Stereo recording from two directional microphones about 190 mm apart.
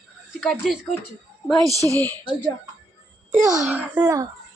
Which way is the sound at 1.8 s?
20° right (ahead or behind).